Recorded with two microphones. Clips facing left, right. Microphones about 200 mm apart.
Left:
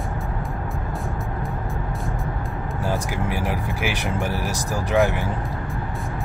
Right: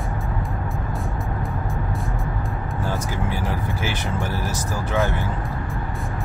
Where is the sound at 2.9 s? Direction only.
15° left (ahead or behind).